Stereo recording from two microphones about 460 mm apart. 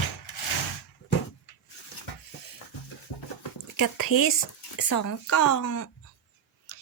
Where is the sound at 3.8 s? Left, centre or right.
Left.